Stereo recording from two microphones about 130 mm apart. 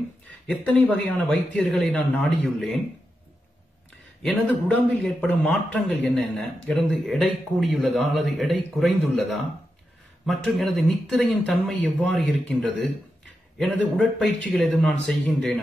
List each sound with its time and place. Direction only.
0.7 s speech: 10° left (ahead or behind)
4.2 s speech: 5° left (ahead or behind)